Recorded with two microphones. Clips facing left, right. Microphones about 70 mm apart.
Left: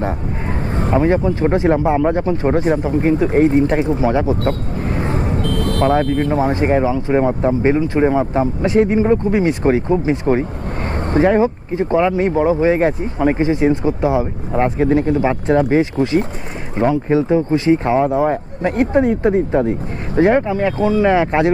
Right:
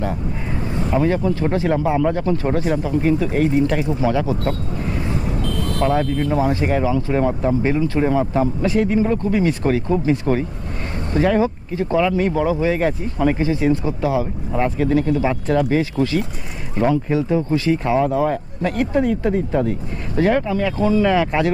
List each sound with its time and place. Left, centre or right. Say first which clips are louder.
0.7 s speech: left 3 dB; left